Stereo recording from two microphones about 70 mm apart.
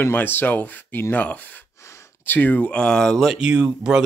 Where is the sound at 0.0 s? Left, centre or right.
Left; by 3.2 s centre.